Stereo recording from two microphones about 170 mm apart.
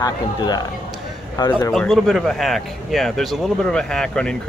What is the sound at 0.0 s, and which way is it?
Speech, 25° left (ahead or behind).